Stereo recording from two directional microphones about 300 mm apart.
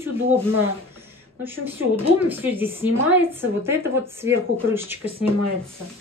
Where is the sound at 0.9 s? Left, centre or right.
Centre.